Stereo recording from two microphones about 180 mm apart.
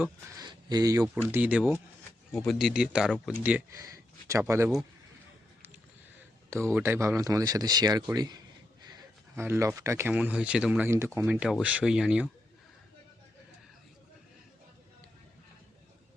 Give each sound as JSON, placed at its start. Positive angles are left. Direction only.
{"t": 0.0, "sound": "speech", "side_deg": -20}
{"t": 1.3, "sound": "speech", "side_deg": -10}
{"t": 6.7, "sound": "speech", "side_deg": -15}